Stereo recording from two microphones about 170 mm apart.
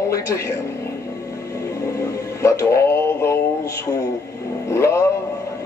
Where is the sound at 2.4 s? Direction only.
15° left (ahead or behind).